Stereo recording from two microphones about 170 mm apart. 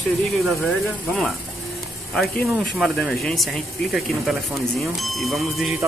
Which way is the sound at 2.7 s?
Centre (ahead or behind).